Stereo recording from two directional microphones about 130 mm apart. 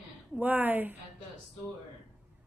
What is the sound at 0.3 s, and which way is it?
Speech, 15° right (ahead or behind).